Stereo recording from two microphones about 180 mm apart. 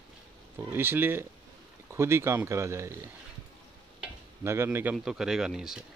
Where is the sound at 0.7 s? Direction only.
10° right (ahead or behind).